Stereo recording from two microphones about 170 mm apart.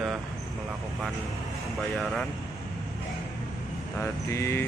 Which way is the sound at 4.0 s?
15° left (ahead or behind).